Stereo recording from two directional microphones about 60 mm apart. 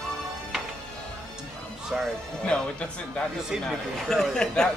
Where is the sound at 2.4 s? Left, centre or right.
Centre.